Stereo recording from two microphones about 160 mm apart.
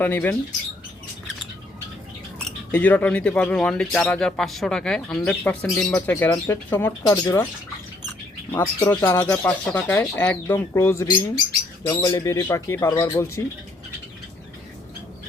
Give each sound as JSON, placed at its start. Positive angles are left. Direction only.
{"t": 0.0, "sound": "speech", "side_deg": 10}
{"t": 2.7, "sound": "speech", "side_deg": 10}
{"t": 8.5, "sound": "speech", "side_deg": 15}